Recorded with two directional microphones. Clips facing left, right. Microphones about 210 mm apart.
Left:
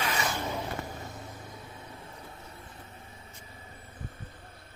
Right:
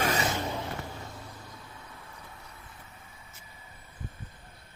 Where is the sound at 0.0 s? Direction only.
40° right (ahead or behind).